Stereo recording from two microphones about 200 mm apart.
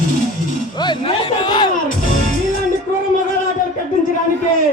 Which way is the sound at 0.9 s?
20° left (ahead or behind).